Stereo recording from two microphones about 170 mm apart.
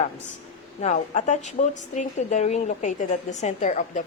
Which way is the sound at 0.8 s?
45° left (ahead or behind).